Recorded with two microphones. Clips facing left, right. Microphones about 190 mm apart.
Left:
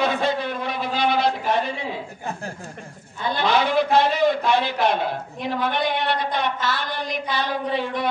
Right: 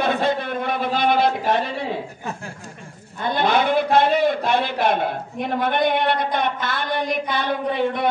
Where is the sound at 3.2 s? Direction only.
55° right (ahead or behind).